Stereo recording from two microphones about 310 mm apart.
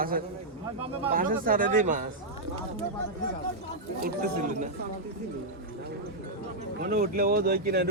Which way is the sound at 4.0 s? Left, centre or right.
Right.